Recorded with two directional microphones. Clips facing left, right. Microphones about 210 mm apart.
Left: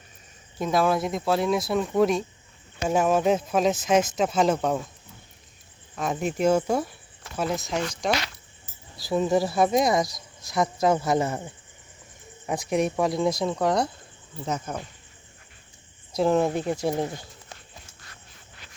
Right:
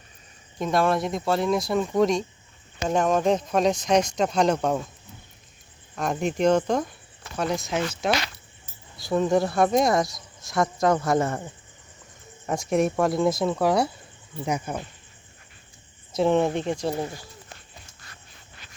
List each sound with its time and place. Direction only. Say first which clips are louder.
0.6 s speech: even; centre (ahead or behind)
6.0 s speech: right 1 dB; centre (ahead or behind)
12.5 s speech: right 2 dB; centre (ahead or behind)
16.1 s speech: right 1 dB; centre (ahead or behind)